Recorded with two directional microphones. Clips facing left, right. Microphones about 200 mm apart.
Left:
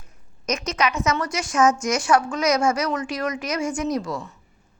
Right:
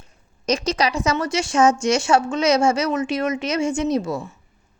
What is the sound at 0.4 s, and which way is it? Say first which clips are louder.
A woman's voice: right 3 dB; 30° right (ahead or behind).